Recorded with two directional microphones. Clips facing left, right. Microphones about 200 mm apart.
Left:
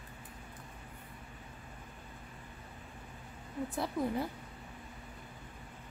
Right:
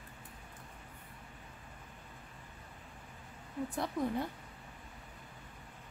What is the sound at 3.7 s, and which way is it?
Speech, 5° left (ahead or behind).